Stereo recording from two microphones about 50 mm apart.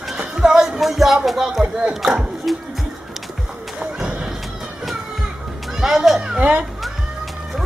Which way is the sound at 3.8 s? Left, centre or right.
Centre.